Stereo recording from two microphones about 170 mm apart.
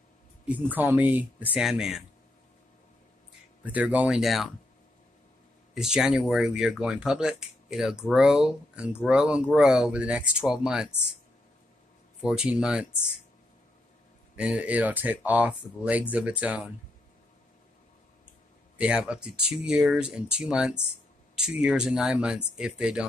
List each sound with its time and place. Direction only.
0.5 s speech: 10° right (ahead or behind)
3.6 s speech: 10° right (ahead or behind)
5.8 s speech: 5° right (ahead or behind)
12.2 s speech: 5° right (ahead or behind)
14.3 s speech: 5° right (ahead or behind)
18.8 s speech: 5° right (ahead or behind)